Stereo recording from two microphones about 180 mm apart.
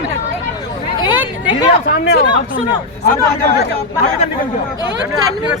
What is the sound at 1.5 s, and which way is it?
Speech, 25° left (ahead or behind).